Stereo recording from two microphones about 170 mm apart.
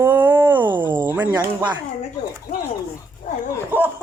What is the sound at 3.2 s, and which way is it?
Dog, 45° left (ahead or behind).